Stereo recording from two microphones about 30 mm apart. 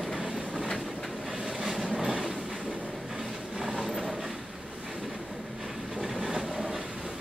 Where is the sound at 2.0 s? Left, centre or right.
Centre.